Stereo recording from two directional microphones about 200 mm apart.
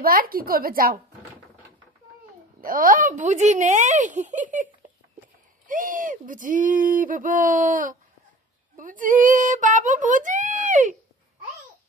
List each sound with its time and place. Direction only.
0.0 s speech: 45° right (ahead or behind)
2.6 s speech: 45° right (ahead or behind)
5.7 s a child's voice: 45° right (ahead or behind)